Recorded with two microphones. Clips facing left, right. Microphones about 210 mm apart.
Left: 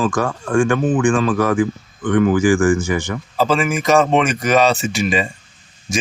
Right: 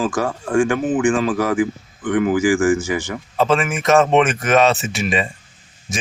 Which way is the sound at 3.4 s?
Centre (ahead or behind).